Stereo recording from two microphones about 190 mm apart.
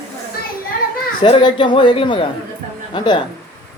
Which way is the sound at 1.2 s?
25° left (ahead or behind).